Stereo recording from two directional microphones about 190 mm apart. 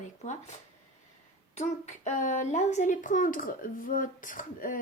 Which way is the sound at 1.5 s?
35° left (ahead or behind).